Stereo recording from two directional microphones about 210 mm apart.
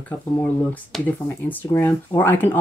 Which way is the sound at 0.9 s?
Centre (ahead or behind).